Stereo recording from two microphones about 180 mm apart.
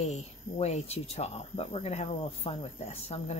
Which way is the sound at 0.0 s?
40° left (ahead or behind).